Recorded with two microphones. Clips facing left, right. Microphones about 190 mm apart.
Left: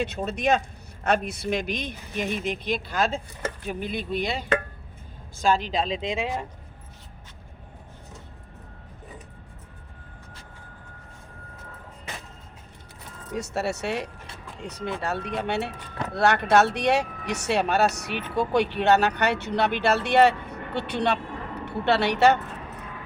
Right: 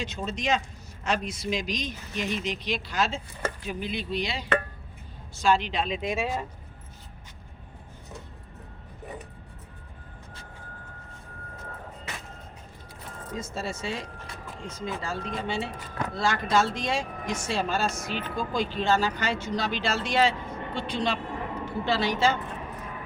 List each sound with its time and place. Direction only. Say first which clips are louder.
0.3 s a woman's voice: left 3 dB; 60° left (ahead or behind)
5.8 s speech: left 1 dB; 25° left (ahead or behind)
13.3 s a woman's voice: left 6 dB; 70° left (ahead or behind)